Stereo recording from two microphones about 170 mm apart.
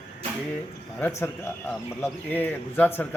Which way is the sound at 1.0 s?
15° left (ahead or behind).